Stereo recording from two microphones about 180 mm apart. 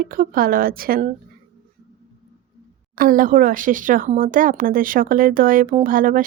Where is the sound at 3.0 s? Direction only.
50° right (ahead or behind).